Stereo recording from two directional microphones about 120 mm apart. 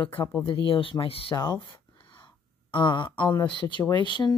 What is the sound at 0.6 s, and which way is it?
Speech, 45° left (ahead or behind).